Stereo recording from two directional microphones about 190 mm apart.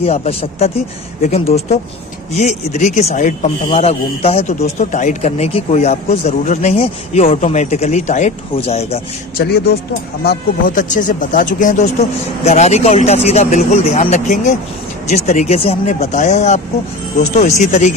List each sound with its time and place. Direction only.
0.0 s speech: 35° left (ahead or behind)
9.4 s speech: 60° left (ahead or behind)
10.2 s speech: 45° left (ahead or behind)